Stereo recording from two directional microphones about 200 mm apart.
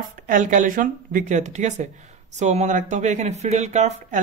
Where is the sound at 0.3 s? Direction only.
40° right (ahead or behind).